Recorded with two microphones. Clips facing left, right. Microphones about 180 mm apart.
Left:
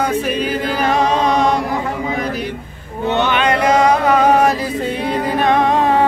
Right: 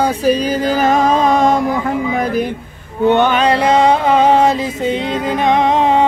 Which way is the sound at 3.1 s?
55° right (ahead or behind).